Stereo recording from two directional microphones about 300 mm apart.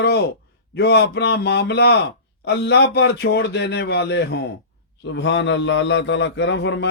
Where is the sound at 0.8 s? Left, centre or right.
Left.